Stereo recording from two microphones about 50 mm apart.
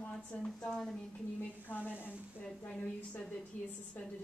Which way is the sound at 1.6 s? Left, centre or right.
Left.